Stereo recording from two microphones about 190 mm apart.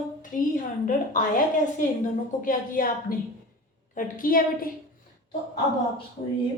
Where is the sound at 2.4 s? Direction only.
45° left (ahead or behind).